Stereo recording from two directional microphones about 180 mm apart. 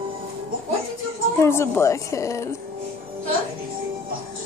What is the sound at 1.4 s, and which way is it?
Speech, 15° left (ahead or behind).